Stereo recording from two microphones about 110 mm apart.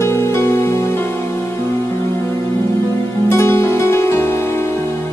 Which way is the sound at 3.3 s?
25° left (ahead or behind).